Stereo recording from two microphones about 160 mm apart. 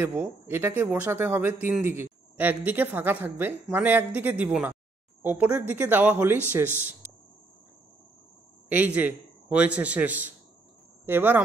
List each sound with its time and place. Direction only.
0.0 s a man's voice: 10° right (ahead or behind)
8.6 s a man's voice: 10° right (ahead or behind)